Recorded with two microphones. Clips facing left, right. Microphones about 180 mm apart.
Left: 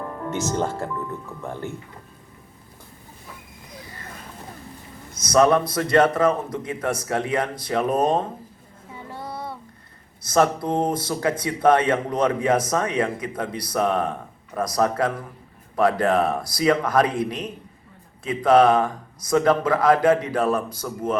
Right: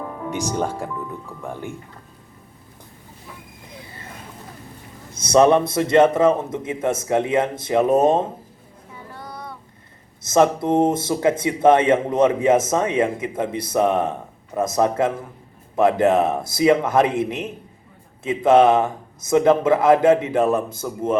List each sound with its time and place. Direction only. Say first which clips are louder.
0.0 s speech: right 1 dB; 5° right (ahead or behind)
5.1 s a man's voice: right 3 dB; 25° right (ahead or behind)
9.1 s child singing: left 3 dB; 25° left (ahead or behind)
10.2 s a man's voice: right 3 dB; 25° right (ahead or behind)